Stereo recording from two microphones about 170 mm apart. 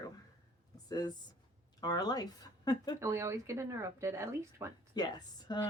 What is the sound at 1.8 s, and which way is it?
Speech, 20° left (ahead or behind).